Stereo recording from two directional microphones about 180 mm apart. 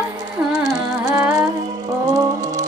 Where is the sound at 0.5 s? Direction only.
20° right (ahead or behind).